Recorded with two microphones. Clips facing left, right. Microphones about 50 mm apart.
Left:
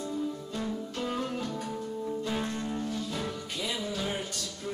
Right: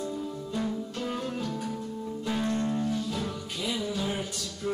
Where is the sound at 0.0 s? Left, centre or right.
Centre.